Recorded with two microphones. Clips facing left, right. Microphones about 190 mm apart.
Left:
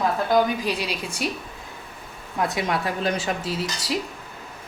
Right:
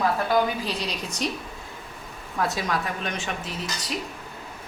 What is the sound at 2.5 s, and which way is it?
Speech, 25° left (ahead or behind).